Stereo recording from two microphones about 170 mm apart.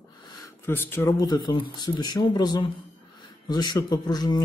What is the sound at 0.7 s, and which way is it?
Speech, 10° left (ahead or behind).